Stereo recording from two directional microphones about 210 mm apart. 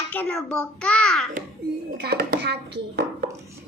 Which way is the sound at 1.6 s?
50° right (ahead or behind).